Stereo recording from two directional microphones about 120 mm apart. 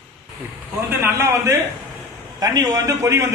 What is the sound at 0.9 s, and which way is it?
A man's voice, 15° right (ahead or behind).